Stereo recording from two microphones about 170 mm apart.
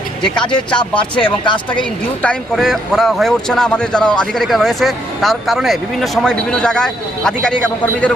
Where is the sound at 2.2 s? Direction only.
5° left (ahead or behind).